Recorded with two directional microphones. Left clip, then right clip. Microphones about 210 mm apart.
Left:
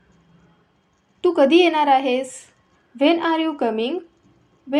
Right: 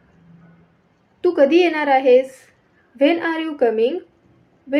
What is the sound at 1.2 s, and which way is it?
A woman's voice, 15° left (ahead or behind).